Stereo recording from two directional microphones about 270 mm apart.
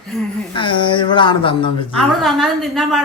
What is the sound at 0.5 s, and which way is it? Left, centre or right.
Speech, centre.